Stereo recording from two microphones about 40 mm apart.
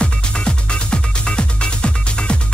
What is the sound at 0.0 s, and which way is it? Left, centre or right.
Music, left.